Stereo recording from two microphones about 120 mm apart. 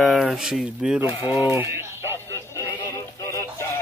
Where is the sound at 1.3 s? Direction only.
20° right (ahead or behind).